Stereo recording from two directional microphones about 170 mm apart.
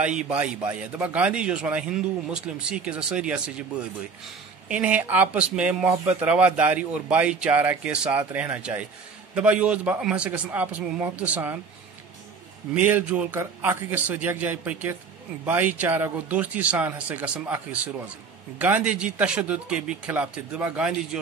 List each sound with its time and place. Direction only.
0.0 s speech: 5° right (ahead or behind)
4.6 s speech: 5° right (ahead or behind)
12.7 s speech: 10° right (ahead or behind)